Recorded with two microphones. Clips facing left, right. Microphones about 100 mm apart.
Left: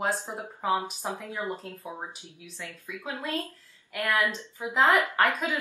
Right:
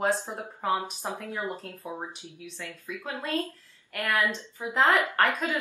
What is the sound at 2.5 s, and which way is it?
Speech, 15° left (ahead or behind).